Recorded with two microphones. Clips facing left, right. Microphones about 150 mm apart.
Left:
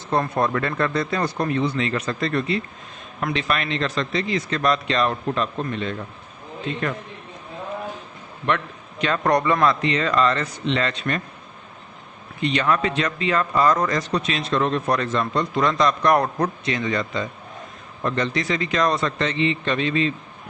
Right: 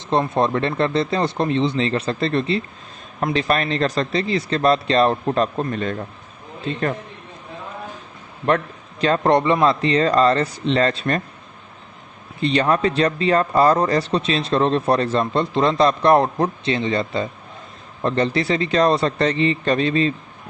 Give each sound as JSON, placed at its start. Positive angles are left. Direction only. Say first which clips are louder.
{"t": 0.1, "sound": "speech", "louder": "right 3 dB", "side_deg": -20}
{"t": 8.4, "sound": "a man's voice", "louder": "right 4 dB", "side_deg": -35}
{"t": 12.4, "sound": "speech", "louder": "right 3 dB", "side_deg": -35}